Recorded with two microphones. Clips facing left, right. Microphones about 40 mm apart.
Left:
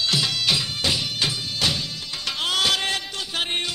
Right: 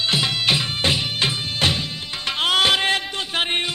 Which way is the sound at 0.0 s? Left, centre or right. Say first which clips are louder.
Right 2 dB; right.